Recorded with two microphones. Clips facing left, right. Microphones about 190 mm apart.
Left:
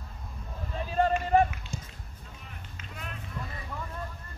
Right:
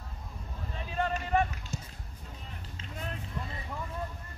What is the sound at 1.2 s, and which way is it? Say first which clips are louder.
Basketball bounce: left 4 dB; 35° left (ahead or behind).